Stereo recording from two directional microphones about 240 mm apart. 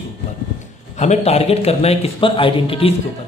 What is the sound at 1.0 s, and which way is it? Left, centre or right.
Speech, left.